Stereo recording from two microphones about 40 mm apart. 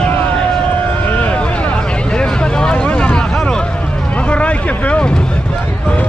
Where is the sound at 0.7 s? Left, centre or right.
Left.